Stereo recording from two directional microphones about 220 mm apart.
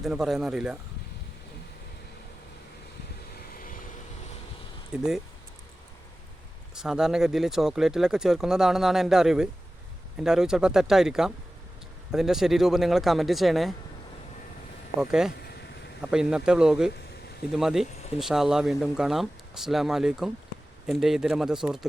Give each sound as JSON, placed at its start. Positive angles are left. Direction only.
{"t": 0.0, "sound": "speech", "side_deg": 0}
{"t": 3.3, "sound": "vehicle", "side_deg": 40}
{"t": 4.9, "sound": "speech", "side_deg": -5}
{"t": 6.7, "sound": "speech", "side_deg": -5}
{"t": 15.0, "sound": "speech", "side_deg": -5}